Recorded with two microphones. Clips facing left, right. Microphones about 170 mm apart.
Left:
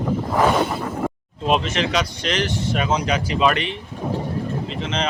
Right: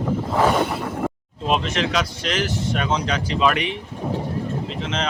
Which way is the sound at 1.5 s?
Centre (ahead or behind).